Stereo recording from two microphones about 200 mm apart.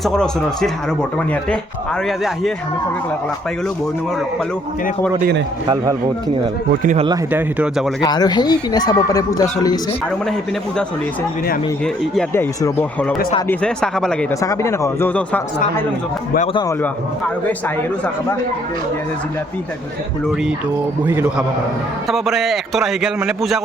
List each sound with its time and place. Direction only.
0.0 s a man's voice: centre (ahead or behind)
2.0 s a man's voice: centre (ahead or behind)
5.6 s speech: 15° right (ahead or behind)
6.8 s a man's voice: 30° right (ahead or behind)
7.1 s speech: 10° right (ahead or behind)
8.0 s speech: 20° left (ahead or behind)
12.1 s a man's voice: 10° left (ahead or behind)
14.4 s speech: 15° left (ahead or behind)
21.1 s a man's voice: 10° right (ahead or behind)